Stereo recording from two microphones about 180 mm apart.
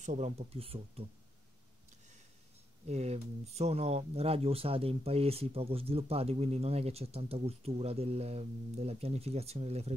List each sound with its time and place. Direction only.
0.0 s speech: 40° right (ahead or behind)
2.9 s speech: 35° right (ahead or behind)